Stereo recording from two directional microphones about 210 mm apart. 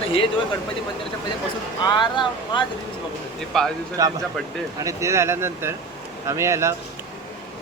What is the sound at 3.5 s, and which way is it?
Speech, centre (ahead or behind).